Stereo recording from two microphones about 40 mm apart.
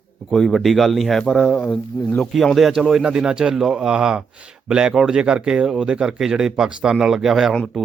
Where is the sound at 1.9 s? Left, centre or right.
Left.